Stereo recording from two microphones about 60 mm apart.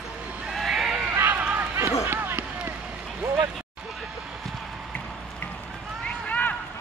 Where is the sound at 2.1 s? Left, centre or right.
Right.